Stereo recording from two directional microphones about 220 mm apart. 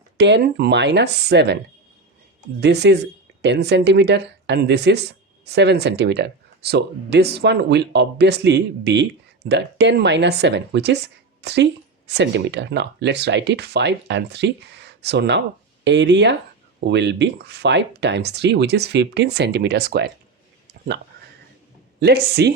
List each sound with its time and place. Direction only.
0.2 s speech: 50° right (ahead or behind)
2.6 s speech: 50° right (ahead or behind)
22.0 s speech: 45° right (ahead or behind)